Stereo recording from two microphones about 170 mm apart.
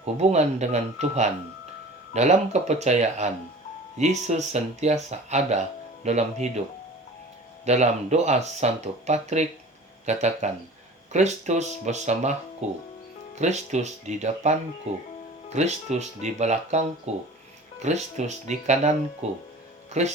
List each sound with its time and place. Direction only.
0.0 s speech: 40° right (ahead or behind)
7.6 s speech: 40° right (ahead or behind)